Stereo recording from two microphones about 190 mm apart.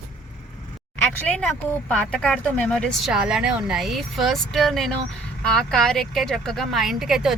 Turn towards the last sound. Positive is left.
turn(degrees=0)  # may be behind; listen again after turning